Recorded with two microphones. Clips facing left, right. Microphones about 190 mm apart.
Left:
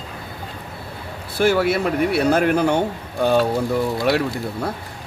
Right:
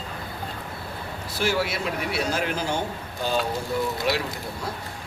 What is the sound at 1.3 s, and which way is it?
Speech, 55° left (ahead or behind).